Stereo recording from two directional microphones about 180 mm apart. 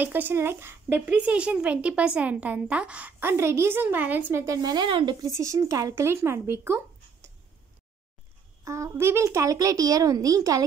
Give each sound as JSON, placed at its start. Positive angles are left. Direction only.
{"t": 0.0, "sound": "speech", "side_deg": -10}
{"t": 8.6, "sound": "speech", "side_deg": -15}